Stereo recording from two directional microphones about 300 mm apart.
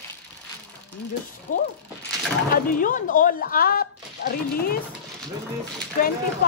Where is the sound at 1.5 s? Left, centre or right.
Left.